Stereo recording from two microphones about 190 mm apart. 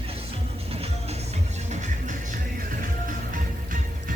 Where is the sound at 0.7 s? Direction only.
35° right (ahead or behind).